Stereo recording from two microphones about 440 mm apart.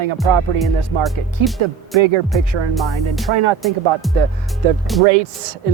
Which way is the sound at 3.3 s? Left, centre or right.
Right.